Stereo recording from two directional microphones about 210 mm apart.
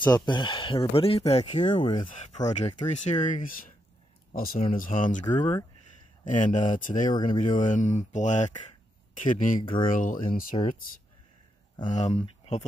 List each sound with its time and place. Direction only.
0.0 s speech: 20° left (ahead or behind)
2.0 s speech: 35° left (ahead or behind)
5.4 s speech: 20° left (ahead or behind)
6.2 s speech: 35° left (ahead or behind)
7.1 s speech: 20° left (ahead or behind)
7.6 s speech: 35° left (ahead or behind)